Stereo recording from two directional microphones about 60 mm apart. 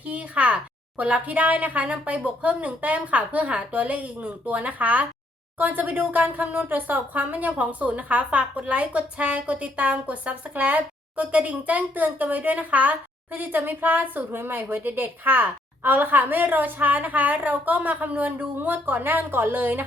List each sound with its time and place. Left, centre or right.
0.0 s speech: right